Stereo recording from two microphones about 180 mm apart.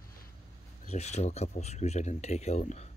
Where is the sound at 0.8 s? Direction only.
40° left (ahead or behind).